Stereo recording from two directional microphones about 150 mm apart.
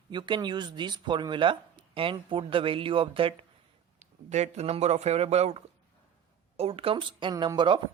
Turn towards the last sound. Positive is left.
turn(degrees=-30)  # may be behind; listen again after turning